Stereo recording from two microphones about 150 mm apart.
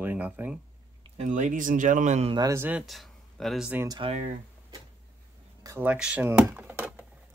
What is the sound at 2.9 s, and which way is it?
Speech, centre (ahead or behind).